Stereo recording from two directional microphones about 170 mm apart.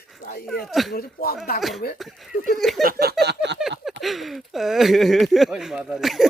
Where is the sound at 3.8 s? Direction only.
Centre (ahead or behind).